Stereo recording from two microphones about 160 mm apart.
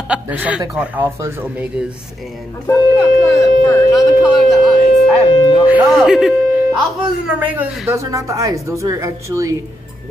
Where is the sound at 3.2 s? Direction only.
15° left (ahead or behind).